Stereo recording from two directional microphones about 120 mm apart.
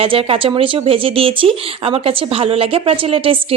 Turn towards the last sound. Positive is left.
turn(degrees=-50)  # may be behind; listen again after turning